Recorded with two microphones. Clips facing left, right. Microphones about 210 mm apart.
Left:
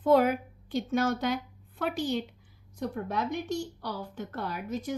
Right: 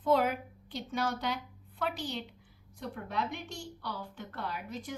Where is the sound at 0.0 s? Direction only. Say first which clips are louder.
Left 5 dB; 45° left (ahead or behind).